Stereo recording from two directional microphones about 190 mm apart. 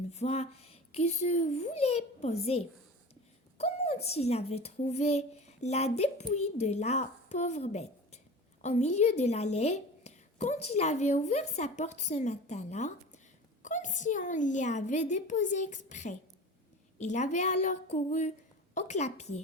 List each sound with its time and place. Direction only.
0.1 s a woman's voice: 35° left (ahead or behind)